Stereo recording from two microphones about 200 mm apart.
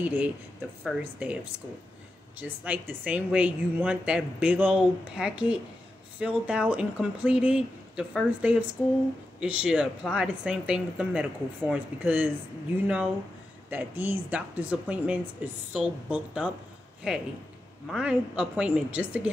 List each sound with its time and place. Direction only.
0.0 s speech: 10° right (ahead or behind)
2.4 s speech: 10° right (ahead or behind)